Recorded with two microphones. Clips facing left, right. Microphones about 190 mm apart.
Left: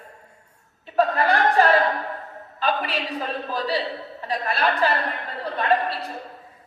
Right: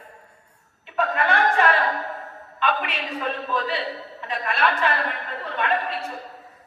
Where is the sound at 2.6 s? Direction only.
35° left (ahead or behind).